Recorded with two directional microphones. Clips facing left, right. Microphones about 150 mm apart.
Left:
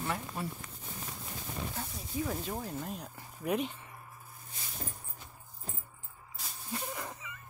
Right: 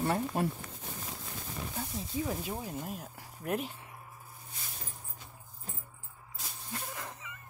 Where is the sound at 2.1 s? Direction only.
25° right (ahead or behind).